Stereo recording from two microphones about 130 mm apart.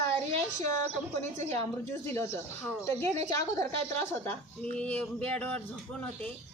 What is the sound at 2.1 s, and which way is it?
Speech, 15° left (ahead or behind).